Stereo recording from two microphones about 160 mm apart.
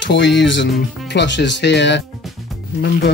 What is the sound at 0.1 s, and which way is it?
Speech, 90° left.